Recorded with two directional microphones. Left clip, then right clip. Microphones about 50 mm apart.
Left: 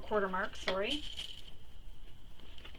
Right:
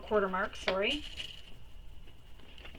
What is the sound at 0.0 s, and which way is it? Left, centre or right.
Speech, centre.